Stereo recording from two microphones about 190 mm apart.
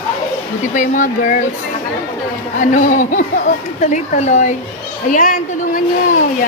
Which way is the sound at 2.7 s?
40° left (ahead or behind).